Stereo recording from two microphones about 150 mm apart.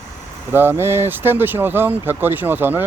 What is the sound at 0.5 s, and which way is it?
Speech, 15° right (ahead or behind).